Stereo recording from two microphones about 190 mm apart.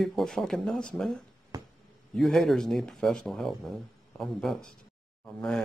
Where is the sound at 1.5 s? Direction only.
20° right (ahead or behind).